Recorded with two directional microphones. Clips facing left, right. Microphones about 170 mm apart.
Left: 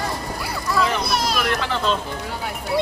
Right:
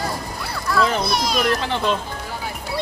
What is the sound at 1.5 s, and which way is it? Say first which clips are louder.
Speech: right 2 dB; 30° right (ahead or behind).